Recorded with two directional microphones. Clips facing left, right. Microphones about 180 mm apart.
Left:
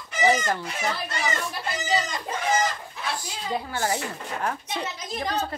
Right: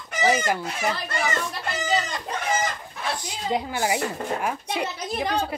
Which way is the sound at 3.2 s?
20° right (ahead or behind).